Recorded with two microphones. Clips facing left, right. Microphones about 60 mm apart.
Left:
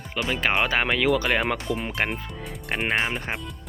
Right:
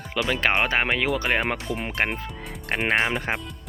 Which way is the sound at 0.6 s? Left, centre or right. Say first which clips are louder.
Even; right.